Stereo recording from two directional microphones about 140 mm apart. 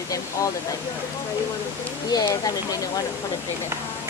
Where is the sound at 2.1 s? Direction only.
25° left (ahead or behind).